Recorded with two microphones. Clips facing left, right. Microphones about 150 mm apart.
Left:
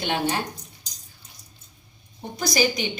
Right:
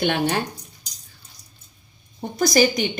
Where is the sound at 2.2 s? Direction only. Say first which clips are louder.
Right 6 dB; 45° right (ahead or behind).